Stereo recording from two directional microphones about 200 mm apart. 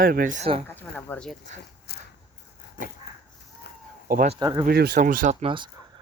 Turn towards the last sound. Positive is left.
turn(degrees=-25)  # may be behind; listen again after turning